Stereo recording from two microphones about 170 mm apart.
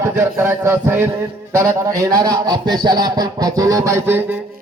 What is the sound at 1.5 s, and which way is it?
Speech, 20° right (ahead or behind).